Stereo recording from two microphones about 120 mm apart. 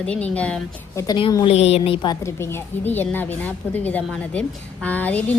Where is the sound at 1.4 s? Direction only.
55° left (ahead or behind).